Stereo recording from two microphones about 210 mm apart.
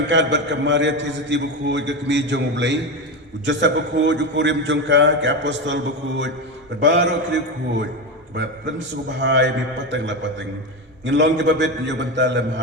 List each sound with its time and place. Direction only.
0.1 s a man's voice: 55° right (ahead or behind)
9.2 s a man's voice: 60° right (ahead or behind)